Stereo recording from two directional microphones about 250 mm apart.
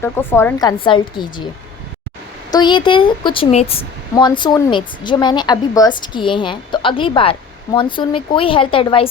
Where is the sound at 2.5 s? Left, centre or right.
Centre.